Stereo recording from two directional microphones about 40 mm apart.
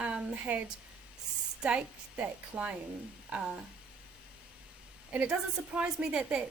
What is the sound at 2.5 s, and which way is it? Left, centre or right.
A woman's voice, right.